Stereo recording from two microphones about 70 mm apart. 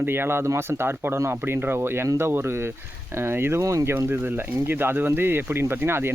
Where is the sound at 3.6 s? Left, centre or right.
Right.